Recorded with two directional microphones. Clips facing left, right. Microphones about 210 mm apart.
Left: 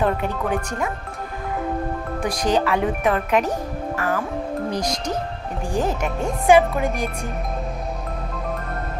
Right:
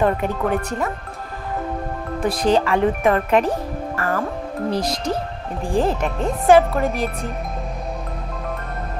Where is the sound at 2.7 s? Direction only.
5° left (ahead or behind).